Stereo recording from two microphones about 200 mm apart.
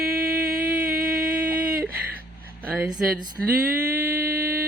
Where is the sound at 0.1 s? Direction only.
50° right (ahead or behind).